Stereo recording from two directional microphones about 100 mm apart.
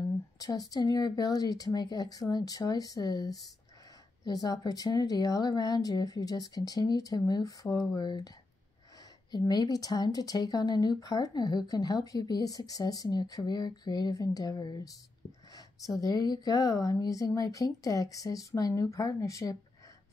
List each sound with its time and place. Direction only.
0.4 s speech: 40° left (ahead or behind)
9.3 s speech: 45° left (ahead or behind)